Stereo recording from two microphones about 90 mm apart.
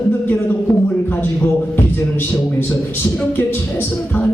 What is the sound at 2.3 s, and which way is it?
A man's voice, 20° left (ahead or behind).